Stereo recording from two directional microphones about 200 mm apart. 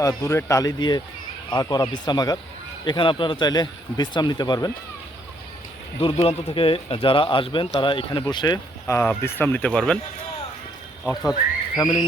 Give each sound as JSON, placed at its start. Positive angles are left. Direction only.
{"t": 0.0, "sound": "speech", "side_deg": 15}
{"t": 6.0, "sound": "speech", "side_deg": 25}
{"t": 11.0, "sound": "speech", "side_deg": 0}
{"t": 11.8, "sound": "speech", "side_deg": 20}